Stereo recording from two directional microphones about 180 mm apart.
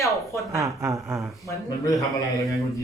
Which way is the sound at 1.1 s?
Centre (ahead or behind).